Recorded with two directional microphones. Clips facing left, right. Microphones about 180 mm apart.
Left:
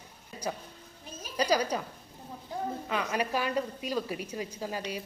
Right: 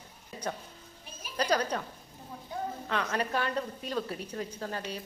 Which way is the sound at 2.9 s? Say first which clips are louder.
Even; 10° left (ahead or behind).